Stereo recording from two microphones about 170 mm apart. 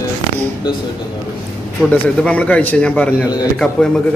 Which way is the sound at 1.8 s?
10° left (ahead or behind).